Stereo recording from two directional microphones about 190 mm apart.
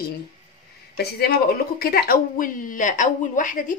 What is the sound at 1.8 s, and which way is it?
A woman's voice, 50° left (ahead or behind).